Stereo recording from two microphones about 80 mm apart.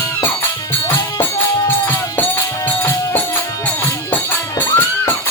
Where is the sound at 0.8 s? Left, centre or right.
Left.